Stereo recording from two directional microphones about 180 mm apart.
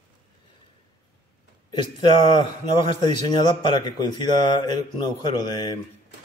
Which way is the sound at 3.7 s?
25° left (ahead or behind).